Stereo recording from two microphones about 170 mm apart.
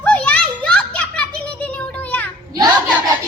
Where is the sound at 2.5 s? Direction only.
20° right (ahead or behind).